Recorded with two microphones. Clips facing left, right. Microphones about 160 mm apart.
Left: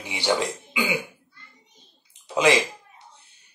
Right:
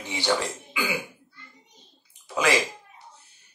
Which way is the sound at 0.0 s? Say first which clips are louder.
Left 2 dB; 10° left (ahead or behind).